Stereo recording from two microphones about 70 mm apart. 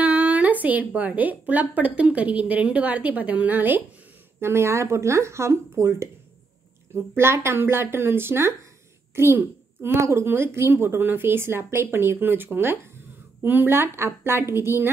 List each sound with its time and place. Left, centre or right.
0.0 s a woman's voice: right
4.4 s speech: right
7.2 s a woman's voice: right